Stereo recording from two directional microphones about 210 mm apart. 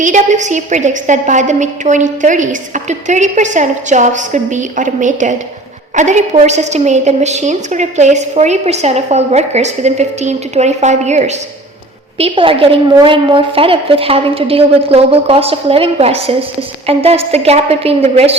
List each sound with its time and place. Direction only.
0.0 s a woman's voice: 35° right (ahead or behind)